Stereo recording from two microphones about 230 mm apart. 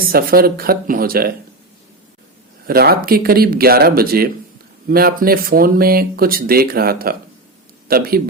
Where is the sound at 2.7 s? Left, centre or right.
Right.